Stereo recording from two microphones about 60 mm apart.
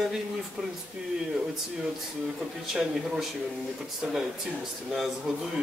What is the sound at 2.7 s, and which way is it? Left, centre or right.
Speech, centre.